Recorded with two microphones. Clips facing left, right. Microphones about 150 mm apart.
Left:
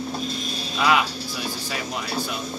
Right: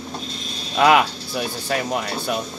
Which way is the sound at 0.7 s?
55° right (ahead or behind).